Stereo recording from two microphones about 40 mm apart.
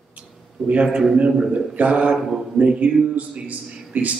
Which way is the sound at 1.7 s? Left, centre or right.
Right.